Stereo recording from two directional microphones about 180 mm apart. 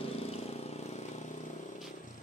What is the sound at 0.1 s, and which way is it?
Vehicle, 35° left (ahead or behind).